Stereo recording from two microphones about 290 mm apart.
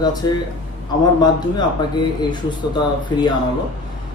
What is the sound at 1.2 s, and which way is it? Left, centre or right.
Speech, centre.